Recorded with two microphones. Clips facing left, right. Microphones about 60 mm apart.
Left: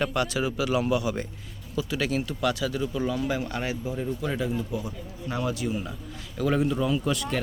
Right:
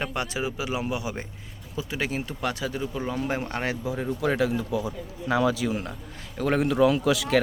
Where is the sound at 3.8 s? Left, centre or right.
Right.